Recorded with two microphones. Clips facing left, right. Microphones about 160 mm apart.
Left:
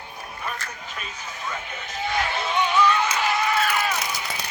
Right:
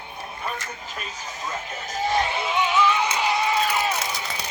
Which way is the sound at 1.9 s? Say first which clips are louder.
Right 4 dB; 40° right (ahead or behind).